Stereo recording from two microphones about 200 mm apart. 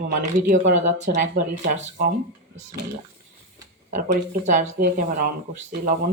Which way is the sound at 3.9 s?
40° right (ahead or behind).